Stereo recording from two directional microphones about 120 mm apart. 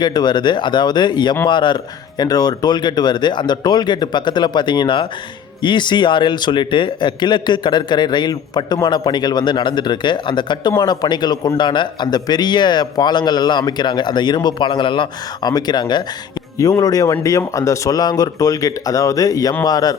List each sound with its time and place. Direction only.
0.0 s a man's voice: 35° left (ahead or behind)